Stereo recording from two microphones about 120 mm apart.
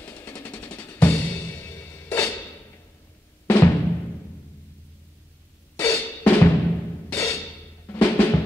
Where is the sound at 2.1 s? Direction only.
25° left (ahead or behind).